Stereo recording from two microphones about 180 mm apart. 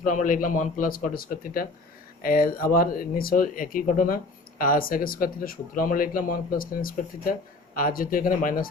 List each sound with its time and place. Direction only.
0.0 s speech: 45° left (ahead or behind)